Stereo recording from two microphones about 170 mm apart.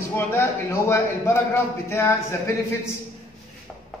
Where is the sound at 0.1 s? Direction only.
15° left (ahead or behind).